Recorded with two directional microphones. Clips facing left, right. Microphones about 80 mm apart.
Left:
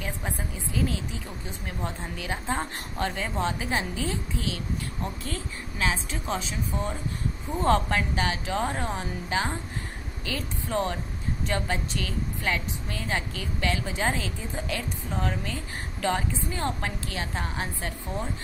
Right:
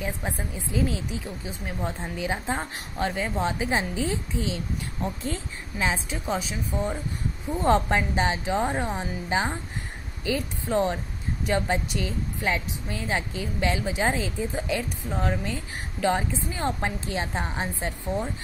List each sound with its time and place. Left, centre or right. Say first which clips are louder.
0.0 s a woman's voice: right 2 dB; centre
7.6 s a woman's voice: right 2 dB; centre